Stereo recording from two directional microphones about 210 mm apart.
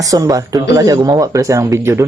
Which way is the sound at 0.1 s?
15° right (ahead or behind).